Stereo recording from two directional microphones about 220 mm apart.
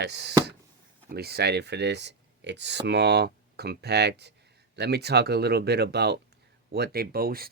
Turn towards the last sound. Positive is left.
turn(degrees=-45)  # may be behind; listen again after turning